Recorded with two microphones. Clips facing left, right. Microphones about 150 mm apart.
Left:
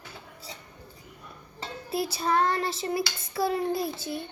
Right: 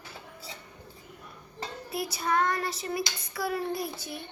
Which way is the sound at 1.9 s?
25° left (ahead or behind).